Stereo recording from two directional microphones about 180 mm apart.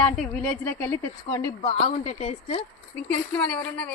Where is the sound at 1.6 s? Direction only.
35° left (ahead or behind).